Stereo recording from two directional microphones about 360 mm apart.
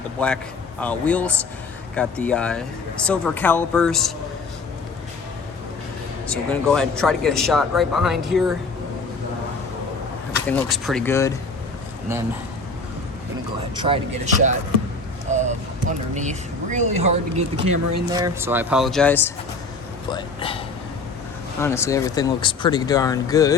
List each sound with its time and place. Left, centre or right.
0.2 s speech: centre
6.2 s speech: centre
10.5 s speech: centre
13.7 s speech: centre
15.3 s a sound: centre
15.9 s speech: centre
21.6 s speech: centre